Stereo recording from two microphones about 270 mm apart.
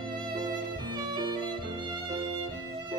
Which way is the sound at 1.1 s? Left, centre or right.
Centre.